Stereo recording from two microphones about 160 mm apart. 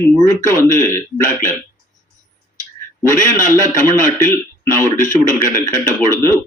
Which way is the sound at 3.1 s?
20° left (ahead or behind).